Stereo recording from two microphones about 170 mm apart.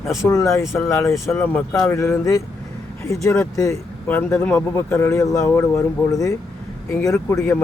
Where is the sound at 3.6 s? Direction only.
15° left (ahead or behind).